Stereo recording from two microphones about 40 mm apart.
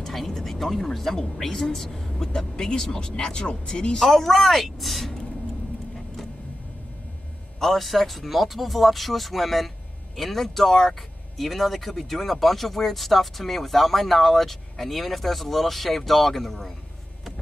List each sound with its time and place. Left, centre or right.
0.0 s speech: centre
4.1 s speech: centre
7.6 s speech: centre